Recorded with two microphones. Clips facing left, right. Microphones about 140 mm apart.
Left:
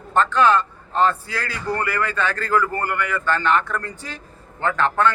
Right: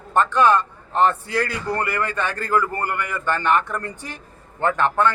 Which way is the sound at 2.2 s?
15° right (ahead or behind).